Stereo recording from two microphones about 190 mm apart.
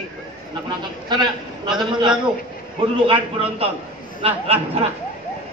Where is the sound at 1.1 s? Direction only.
25° right (ahead or behind).